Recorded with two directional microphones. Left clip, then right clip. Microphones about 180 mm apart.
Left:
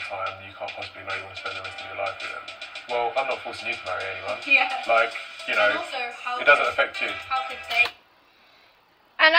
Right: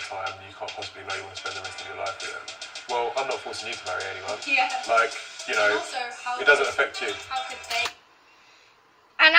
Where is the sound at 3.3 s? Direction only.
40° left (ahead or behind).